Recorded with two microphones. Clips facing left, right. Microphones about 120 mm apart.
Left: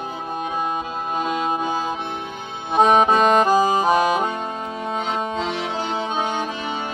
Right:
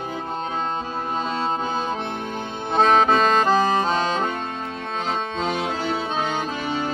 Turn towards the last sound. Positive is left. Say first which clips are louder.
# right 1 dB
turn(degrees=-45)  # may be behind; listen again after turning